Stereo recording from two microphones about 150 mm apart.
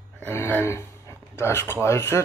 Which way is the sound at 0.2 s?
15° left (ahead or behind).